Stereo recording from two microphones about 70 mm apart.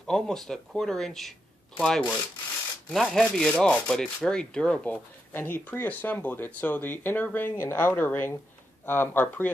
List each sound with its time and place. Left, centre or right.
0.0 s speech: centre
1.8 s rub: centre
2.9 s speech: centre
3.2 s rub: centre
4.9 s speech: left